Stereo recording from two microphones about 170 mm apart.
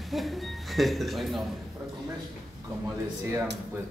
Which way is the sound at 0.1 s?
Centre (ahead or behind).